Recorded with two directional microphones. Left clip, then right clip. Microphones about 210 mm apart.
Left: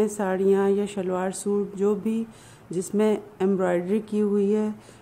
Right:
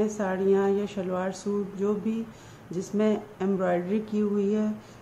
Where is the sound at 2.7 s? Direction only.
50° left (ahead or behind).